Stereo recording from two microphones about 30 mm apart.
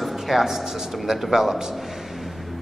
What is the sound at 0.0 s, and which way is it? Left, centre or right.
A man's voice, centre.